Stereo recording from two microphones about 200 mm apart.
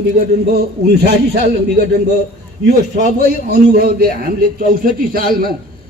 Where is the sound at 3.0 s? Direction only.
45° right (ahead or behind).